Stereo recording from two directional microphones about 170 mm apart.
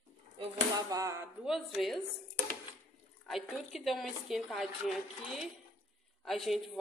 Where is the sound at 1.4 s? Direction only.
Centre (ahead or behind).